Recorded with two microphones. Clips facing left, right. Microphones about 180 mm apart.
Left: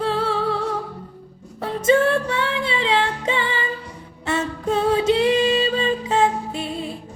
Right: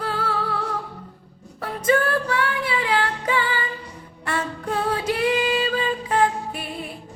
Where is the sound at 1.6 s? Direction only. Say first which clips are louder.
Left 4 dB; 25° left (ahead or behind).